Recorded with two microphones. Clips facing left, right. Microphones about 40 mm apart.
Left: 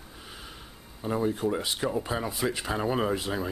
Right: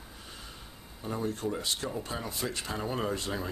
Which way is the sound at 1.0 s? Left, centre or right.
Centre.